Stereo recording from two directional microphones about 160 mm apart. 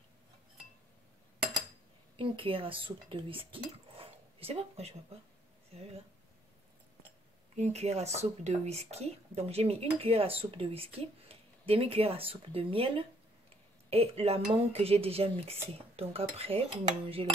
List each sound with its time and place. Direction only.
2.1 s speech: 35° right (ahead or behind)
7.5 s speech: 45° right (ahead or behind)